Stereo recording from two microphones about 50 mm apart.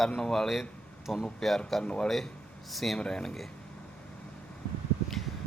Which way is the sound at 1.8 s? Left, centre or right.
Left.